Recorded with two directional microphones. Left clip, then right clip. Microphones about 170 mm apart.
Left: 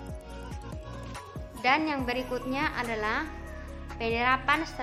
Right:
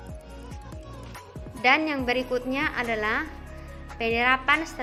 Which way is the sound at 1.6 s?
20° right (ahead or behind).